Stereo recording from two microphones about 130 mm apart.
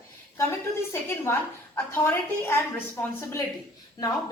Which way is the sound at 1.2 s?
20° left (ahead or behind).